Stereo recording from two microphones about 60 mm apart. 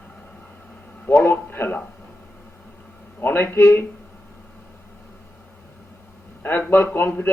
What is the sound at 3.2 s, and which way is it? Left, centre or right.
Speech, left.